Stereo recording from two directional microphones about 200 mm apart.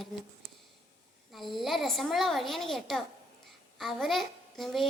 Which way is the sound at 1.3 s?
Centre (ahead or behind).